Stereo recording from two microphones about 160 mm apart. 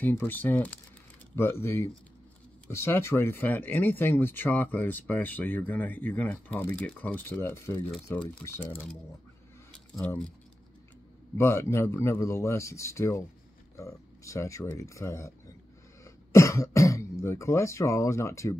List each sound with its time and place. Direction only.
0.0 s speech: 15° left (ahead or behind)
9.7 s a sound: 5° left (ahead or behind)
11.3 s speech: 15° left (ahead or behind)